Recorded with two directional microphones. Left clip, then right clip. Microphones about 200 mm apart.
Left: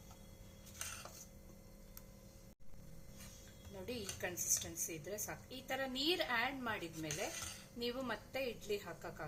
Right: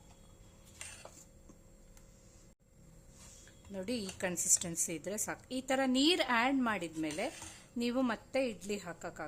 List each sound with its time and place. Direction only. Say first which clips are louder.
3.8 s a woman's voice: right 6 dB; 60° right (ahead or behind)